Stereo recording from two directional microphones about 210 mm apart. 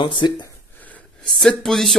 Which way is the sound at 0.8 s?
5° left (ahead or behind).